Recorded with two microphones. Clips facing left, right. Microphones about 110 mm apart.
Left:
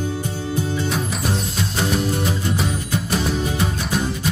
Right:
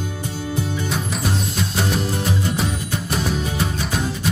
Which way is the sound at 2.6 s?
Centre (ahead or behind).